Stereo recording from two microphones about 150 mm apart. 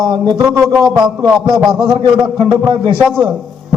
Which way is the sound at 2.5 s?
30° right (ahead or behind).